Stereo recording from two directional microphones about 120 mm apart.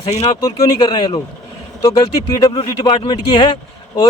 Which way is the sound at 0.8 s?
40° left (ahead or behind).